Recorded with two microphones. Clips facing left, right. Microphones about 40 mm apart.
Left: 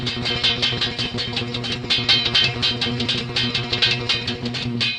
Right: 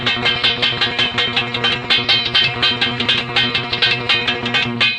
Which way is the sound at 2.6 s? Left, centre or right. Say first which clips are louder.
Right 6 dB; right.